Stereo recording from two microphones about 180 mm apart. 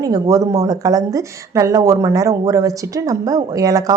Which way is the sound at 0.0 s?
20° right (ahead or behind).